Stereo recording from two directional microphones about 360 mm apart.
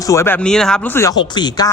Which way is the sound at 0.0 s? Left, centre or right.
Centre.